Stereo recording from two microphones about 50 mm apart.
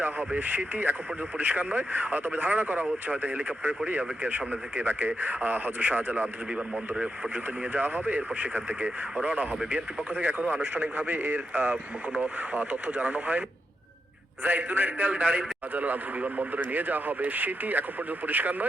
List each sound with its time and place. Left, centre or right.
0.3 s a man's voice: right
7.7 s a man's voice: right
9.2 s a man's voice: right
14.4 s a man's voice: right